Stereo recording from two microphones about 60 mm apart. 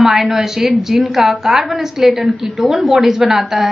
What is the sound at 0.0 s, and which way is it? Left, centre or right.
A woman's voice, centre.